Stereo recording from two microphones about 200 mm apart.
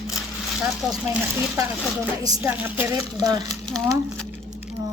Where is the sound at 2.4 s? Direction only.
10° right (ahead or behind).